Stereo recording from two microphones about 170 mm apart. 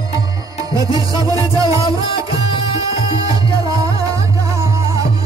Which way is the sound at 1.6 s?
20° right (ahead or behind).